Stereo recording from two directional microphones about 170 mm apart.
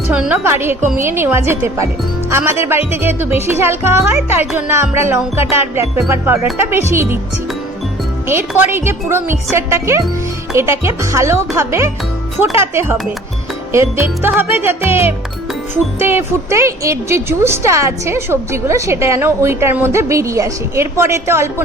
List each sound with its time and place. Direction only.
0.1 s speech: 5° right (ahead or behind)
8.3 s speech: 15° right (ahead or behind)